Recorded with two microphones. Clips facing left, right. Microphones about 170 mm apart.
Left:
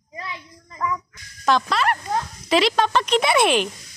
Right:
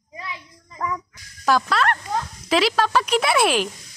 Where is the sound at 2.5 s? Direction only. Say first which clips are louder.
Left 1 dB; 5° right (ahead or behind).